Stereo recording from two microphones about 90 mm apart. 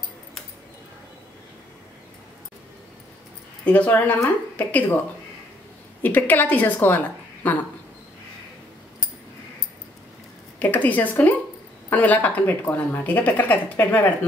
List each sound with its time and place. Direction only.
3.6 s speech: 15° left (ahead or behind)
6.0 s a woman's voice: 20° left (ahead or behind)
10.6 s speech: 20° left (ahead or behind)